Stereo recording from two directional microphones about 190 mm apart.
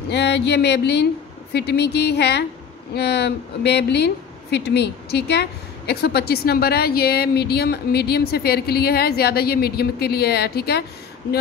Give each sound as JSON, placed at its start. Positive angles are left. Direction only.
{"t": 0.1, "sound": "a woman's voice", "side_deg": 65}